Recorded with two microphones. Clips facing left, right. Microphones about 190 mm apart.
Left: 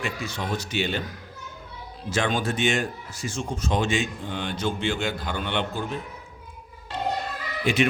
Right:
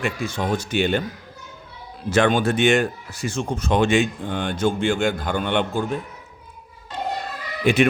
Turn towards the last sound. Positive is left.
turn(degrees=-55)  # may be behind; listen again after turning